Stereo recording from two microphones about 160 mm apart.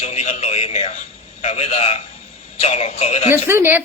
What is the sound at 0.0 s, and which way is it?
A man's voice, 40° left (ahead or behind).